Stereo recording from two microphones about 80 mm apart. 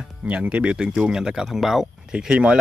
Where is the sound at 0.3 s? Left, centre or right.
Centre.